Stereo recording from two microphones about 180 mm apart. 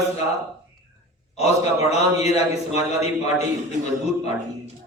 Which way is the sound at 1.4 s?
35° left (ahead or behind).